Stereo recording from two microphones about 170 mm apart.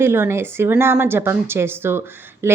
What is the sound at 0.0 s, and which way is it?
A woman's voice, 15° right (ahead or behind).